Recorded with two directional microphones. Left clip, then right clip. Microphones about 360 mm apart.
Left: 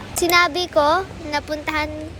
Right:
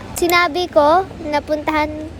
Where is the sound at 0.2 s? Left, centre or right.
Centre.